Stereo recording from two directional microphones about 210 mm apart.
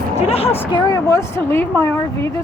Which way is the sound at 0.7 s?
15° left (ahead or behind).